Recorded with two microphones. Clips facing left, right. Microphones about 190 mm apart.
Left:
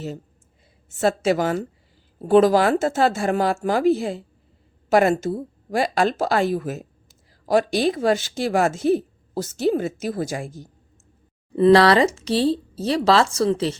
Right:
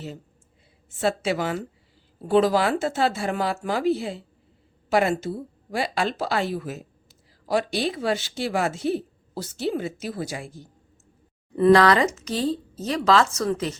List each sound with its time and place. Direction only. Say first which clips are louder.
0.9 s a woman's voice: left 4 dB; 45° left (ahead or behind)
11.5 s speech: left 2 dB; 30° left (ahead or behind)